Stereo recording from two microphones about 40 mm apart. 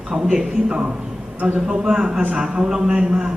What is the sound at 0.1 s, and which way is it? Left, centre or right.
Speech, right.